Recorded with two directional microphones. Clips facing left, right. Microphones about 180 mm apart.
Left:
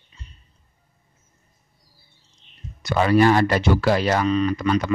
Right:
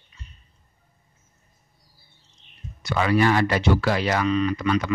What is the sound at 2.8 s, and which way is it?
Speech, 40° left (ahead or behind).